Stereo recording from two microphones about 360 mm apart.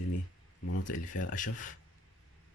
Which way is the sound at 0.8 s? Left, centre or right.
Left.